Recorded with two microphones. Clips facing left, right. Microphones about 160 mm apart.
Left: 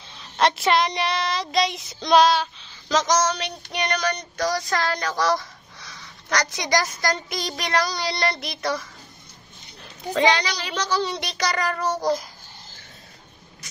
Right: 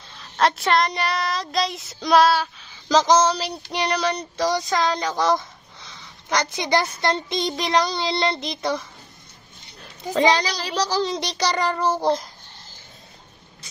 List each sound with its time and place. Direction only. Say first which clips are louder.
0.1 s child singing: even; centre (ahead or behind)
2.9 s child singing: right 4 dB; 30° right (ahead or behind)
10.1 s child singing: right 2 dB; 40° right (ahead or behind)